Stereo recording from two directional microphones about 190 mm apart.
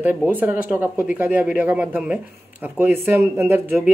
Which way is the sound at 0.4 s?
10° right (ahead or behind).